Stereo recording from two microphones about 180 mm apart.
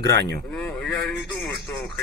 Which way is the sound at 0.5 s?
5° left (ahead or behind).